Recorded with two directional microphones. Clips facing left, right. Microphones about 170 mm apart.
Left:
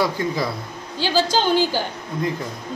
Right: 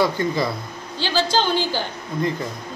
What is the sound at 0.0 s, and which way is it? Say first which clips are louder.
Speech: right 2 dB; centre (ahead or behind).